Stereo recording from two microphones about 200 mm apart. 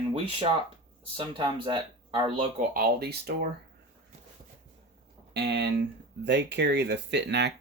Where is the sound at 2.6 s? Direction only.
45° right (ahead or behind).